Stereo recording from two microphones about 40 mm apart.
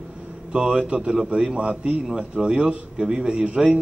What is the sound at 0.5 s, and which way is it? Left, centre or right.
Speech, right.